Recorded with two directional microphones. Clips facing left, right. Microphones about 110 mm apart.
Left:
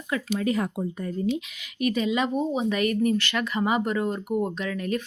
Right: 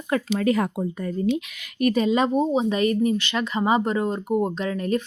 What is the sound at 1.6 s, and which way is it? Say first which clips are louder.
Speech: right 6 dB; 45° right (ahead or behind).